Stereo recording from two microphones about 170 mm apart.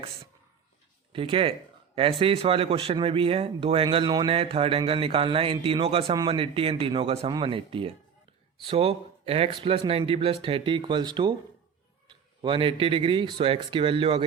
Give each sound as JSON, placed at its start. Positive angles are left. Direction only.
{"t": 1.1, "sound": "a man's voice", "side_deg": -30}